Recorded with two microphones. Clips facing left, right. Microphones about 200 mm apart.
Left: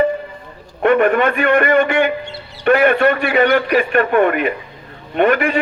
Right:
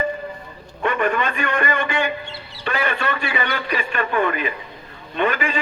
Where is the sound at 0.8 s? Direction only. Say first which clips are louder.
Left 8 dB; 55° left (ahead or behind).